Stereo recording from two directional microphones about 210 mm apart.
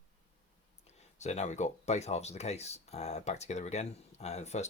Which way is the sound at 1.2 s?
35° left (ahead or behind).